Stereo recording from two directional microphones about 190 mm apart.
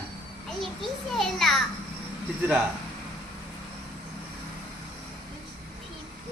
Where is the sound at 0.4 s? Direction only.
Centre (ahead or behind).